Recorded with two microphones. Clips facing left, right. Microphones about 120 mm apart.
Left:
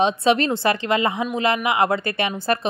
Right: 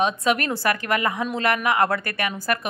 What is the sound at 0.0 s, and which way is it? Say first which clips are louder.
A woman's voice: left 4 dB; 25° left (ahead or behind).